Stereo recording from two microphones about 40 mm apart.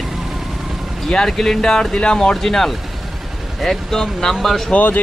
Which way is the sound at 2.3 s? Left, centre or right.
Centre.